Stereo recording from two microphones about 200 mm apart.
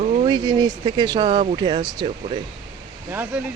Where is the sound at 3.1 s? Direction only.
10° right (ahead or behind).